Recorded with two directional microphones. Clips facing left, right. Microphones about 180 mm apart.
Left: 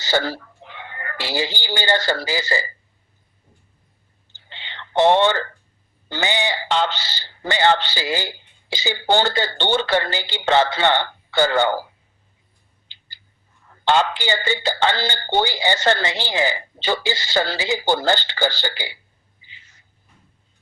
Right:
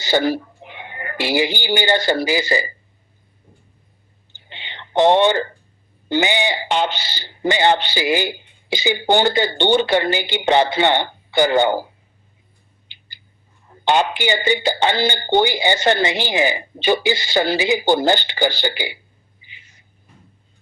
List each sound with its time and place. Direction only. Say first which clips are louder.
0.0 s speech: right 4 dB; 15° right (ahead or behind)
4.4 s whispering: right 1 dB; 15° right (ahead or behind)
6.1 s speech: right 4 dB; 15° right (ahead or behind)
13.7 s speech: right 1 dB; 20° right (ahead or behind)
19.4 s a sound: right 1 dB; 15° right (ahead or behind)